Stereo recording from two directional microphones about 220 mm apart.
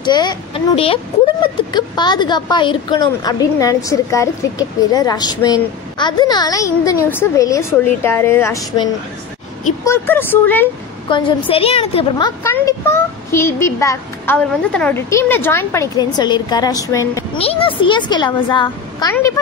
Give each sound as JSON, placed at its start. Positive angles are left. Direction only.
{"t": 0.0, "sound": "a child's voice", "side_deg": 20}
{"t": 9.8, "sound": "speech", "side_deg": 10}
{"t": 11.1, "sound": "a child's voice", "side_deg": 20}
{"t": 12.4, "sound": "speech", "side_deg": 10}
{"t": 17.4, "sound": "a child's voice", "side_deg": 25}